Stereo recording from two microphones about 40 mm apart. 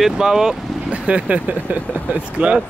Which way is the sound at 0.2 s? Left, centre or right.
Centre.